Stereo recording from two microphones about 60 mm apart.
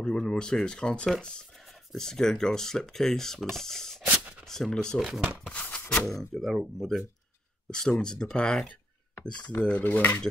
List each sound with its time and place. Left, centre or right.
0.0 s speech: centre
4.0 s a sound: right
4.5 s speech: centre
4.9 s speech: centre
5.5 s music: left
6.3 s speech: centre; by 10.1 s left